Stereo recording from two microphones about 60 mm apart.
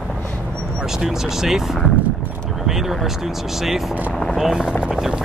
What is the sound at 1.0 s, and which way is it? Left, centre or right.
Speech, centre.